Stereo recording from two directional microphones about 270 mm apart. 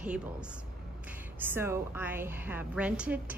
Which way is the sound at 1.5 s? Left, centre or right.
Centre.